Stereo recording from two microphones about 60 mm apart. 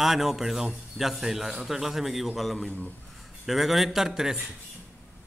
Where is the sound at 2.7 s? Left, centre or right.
Left.